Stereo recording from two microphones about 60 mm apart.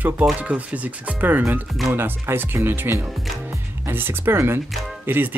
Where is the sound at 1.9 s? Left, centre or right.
Right.